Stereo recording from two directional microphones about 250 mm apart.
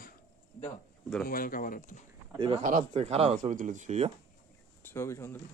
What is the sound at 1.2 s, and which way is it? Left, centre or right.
Speech, left.